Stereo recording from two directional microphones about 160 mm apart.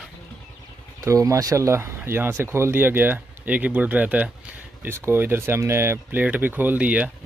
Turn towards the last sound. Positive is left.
turn(degrees=-10)  # may be behind; listen again after turning